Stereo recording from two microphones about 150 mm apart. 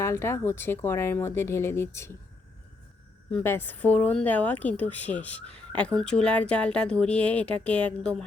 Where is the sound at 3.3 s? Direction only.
15° left (ahead or behind).